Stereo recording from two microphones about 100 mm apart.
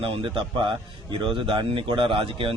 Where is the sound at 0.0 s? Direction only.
60° right (ahead or behind).